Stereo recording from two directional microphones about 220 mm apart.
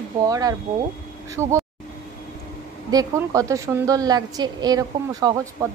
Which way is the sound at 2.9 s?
15° right (ahead or behind).